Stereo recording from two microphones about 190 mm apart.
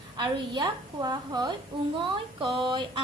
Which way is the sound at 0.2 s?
20° right (ahead or behind).